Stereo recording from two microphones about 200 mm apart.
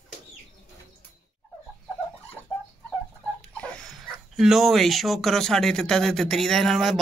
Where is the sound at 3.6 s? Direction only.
5° left (ahead or behind).